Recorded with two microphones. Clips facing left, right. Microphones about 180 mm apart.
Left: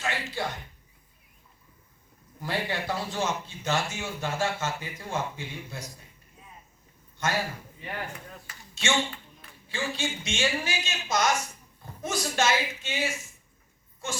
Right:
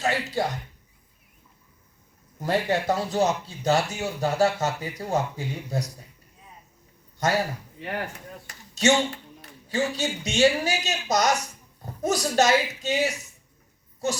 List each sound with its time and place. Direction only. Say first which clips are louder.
0.0 s a sound: right 6 dB; 40° right (ahead or behind)
2.4 s speech: right 7 dB; 45° right (ahead or behind)
7.2 s speech: right 5 dB; 40° right (ahead or behind)
7.8 s speech: right 6 dB; 70° right (ahead or behind)
8.7 s a man's voice: right 7 dB; 40° right (ahead or behind)